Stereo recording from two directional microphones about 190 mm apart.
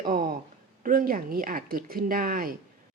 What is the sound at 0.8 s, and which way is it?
A woman's voice, 50° right (ahead or behind).